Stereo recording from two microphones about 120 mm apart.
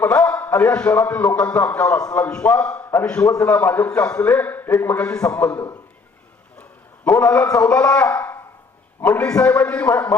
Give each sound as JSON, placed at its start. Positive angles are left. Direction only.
{"t": 0.0, "sound": "a man's voice", "side_deg": 10}
{"t": 3.2, "sound": "a man's voice", "side_deg": 25}
{"t": 6.6, "sound": "a sound", "side_deg": 15}
{"t": 7.6, "sound": "a man's voice", "side_deg": 10}